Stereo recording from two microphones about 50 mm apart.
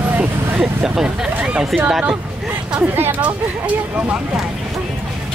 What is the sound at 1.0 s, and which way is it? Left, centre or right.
Speech, right.